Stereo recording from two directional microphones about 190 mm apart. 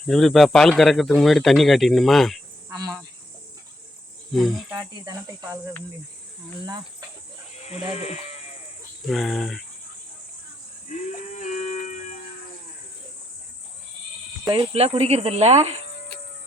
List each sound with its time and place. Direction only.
0.0 s speech: centre (ahead or behind)
2.6 s cricket: 20° right (ahead or behind)
4.3 s speech: centre (ahead or behind)
4.7 s cricket: 20° right (ahead or behind)
7.7 s speech: 35° left (ahead or behind)
9.0 s speech: centre (ahead or behind)
10.8 s a sound: 40° left (ahead or behind)
14.4 s speech: 25° right (ahead or behind)